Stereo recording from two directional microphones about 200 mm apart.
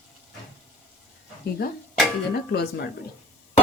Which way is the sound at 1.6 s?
50° left (ahead or behind).